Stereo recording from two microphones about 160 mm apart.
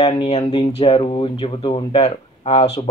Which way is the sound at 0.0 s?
40° left (ahead or behind).